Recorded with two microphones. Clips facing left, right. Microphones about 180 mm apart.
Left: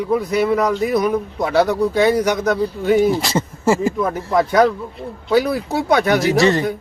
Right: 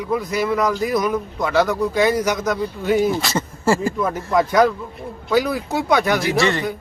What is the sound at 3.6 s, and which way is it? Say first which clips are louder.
Speech: left 2 dB; 20° left (ahead or behind).